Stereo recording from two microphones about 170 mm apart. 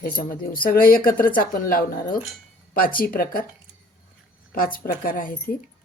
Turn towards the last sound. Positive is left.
turn(degrees=55)  # may be behind; listen again after turning